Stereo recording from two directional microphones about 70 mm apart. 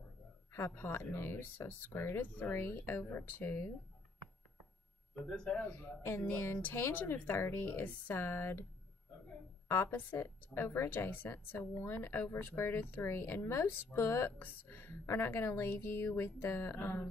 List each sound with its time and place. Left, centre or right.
0.5 s speech: left
5.1 s speech: centre
5.6 s a man's voice: left
9.7 s speech: left